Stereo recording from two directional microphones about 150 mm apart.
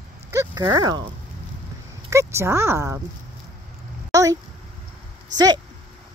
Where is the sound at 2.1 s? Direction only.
20° right (ahead or behind).